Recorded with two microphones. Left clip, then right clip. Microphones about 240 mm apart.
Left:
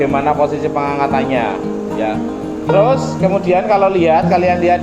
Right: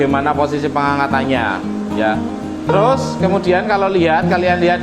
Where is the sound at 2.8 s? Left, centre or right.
Right.